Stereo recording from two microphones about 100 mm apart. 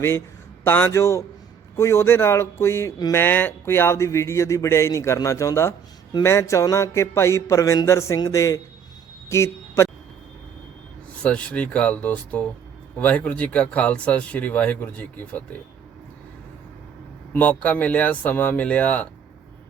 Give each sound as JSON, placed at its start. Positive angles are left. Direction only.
{"t": 0.6, "sound": "speech", "side_deg": 20}
{"t": 9.3, "sound": "a sound", "side_deg": 30}
{"t": 11.2, "sound": "speech", "side_deg": 10}
{"t": 17.3, "sound": "speech", "side_deg": 15}